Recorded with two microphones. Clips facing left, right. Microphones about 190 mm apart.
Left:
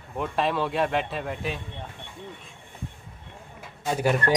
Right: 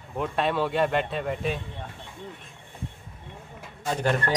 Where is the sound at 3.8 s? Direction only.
10° left (ahead or behind).